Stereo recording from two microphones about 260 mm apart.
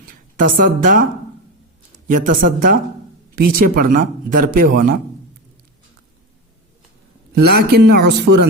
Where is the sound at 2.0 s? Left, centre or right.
Right.